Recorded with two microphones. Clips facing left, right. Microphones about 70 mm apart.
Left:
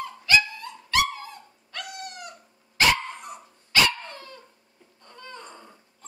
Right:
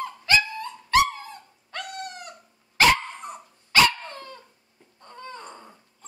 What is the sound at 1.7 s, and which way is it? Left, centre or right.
Dog, right.